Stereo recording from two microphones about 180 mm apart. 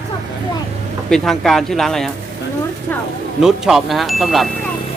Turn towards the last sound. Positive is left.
turn(degrees=0)  # may be behind; listen again after turning